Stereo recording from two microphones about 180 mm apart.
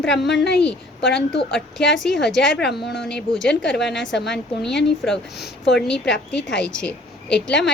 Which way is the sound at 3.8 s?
75° left (ahead or behind).